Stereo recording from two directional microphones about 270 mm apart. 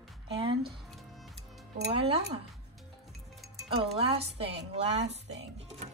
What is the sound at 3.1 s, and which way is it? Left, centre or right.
Music, centre.